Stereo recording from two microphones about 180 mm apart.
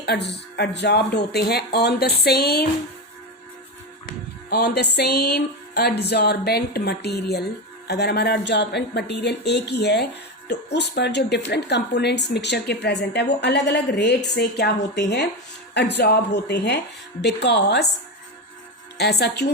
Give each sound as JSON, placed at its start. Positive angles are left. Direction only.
{"t": 0.0, "sound": "speech", "side_deg": 65}
{"t": 4.4, "sound": "speech", "side_deg": 65}
{"t": 18.9, "sound": "speech", "side_deg": 65}